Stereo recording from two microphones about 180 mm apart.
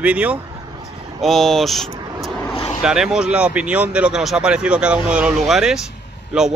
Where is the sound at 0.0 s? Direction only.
5° right (ahead or behind).